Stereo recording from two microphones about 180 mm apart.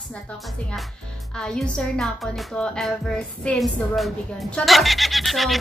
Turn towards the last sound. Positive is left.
turn(degrees=0)  # may be behind; listen again after turning